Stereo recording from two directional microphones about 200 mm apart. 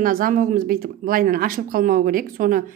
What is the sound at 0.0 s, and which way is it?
Speech, 45° right (ahead or behind).